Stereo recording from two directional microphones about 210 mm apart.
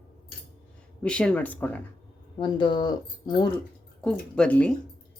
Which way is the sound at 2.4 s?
20° left (ahead or behind).